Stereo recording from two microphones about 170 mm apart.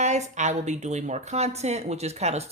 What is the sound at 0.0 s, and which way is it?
Speech, 45° right (ahead or behind).